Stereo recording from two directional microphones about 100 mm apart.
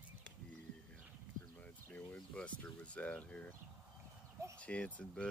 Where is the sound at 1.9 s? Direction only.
10° left (ahead or behind).